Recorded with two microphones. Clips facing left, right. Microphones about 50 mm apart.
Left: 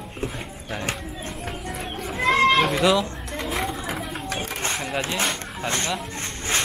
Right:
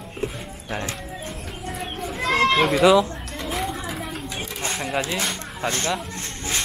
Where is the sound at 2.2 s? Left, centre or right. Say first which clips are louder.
Left 2 dB; left.